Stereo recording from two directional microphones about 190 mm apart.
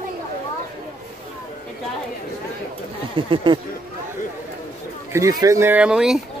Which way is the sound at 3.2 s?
25° right (ahead or behind).